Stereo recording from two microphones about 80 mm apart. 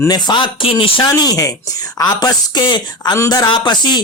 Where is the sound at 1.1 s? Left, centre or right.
Left.